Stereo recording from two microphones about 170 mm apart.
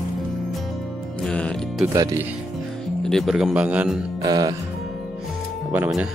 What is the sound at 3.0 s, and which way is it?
Speech, centre (ahead or behind).